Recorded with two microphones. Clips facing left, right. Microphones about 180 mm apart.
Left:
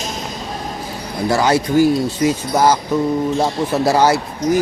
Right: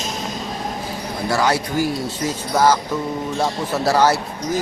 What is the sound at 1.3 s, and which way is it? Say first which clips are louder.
Speech: left 4 dB; 20° left (ahead or behind).